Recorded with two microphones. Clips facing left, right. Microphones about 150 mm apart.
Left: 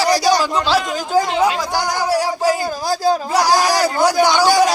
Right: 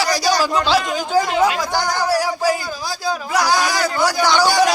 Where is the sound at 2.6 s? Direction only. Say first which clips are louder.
Left 7 dB; 45° left (ahead or behind).